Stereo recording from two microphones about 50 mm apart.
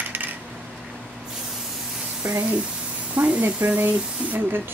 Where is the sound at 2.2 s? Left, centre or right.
Right.